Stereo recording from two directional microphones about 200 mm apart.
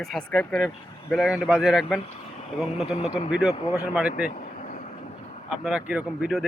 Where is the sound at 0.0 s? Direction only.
Centre (ahead or behind).